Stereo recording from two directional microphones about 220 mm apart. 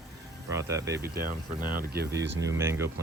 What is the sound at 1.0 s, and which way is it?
Speech, 45° right (ahead or behind).